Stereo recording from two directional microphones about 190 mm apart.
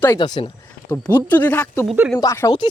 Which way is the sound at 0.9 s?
10° left (ahead or behind).